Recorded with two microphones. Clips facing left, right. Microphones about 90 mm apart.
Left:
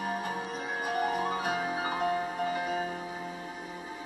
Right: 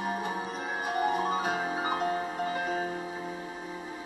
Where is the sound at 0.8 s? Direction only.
20° right (ahead or behind).